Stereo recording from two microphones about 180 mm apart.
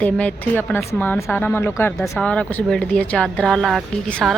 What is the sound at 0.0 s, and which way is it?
A woman's voice, 5° left (ahead or behind).